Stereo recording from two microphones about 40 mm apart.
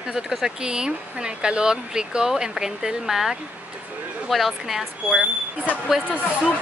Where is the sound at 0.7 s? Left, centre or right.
Right.